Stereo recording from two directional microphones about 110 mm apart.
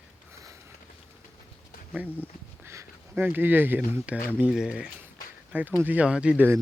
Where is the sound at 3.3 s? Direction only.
15° right (ahead or behind).